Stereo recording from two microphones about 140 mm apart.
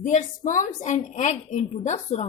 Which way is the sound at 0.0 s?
60° left (ahead or behind).